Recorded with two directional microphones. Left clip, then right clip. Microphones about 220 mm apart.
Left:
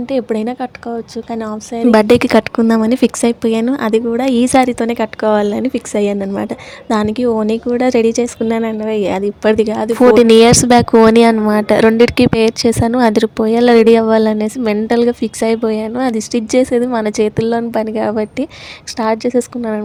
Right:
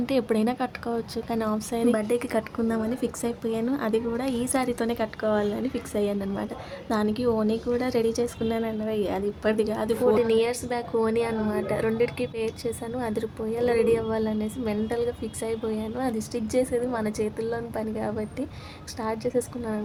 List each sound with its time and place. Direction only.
0.0 s a woman's voice: 20° left (ahead or behind)
1.9 s speech: 45° left (ahead or behind)
10.2 s a woman's voice: 50° left (ahead or behind)